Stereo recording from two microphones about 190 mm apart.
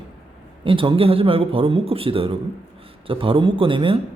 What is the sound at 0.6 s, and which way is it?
A man's voice, 25° right (ahead or behind).